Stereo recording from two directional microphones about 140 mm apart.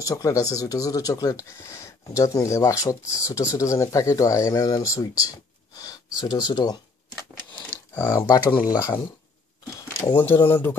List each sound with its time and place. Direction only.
0.0 s speech: 25° left (ahead or behind)
7.9 s speech: 15° left (ahead or behind)
8.3 s speech: 30° left (ahead or behind)
10.1 s speech: 15° left (ahead or behind)